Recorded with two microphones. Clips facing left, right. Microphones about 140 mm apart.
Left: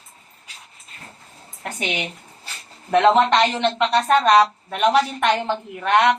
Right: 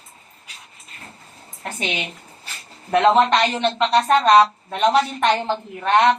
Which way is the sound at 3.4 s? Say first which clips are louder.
Left 1 dB; 20° left (ahead or behind).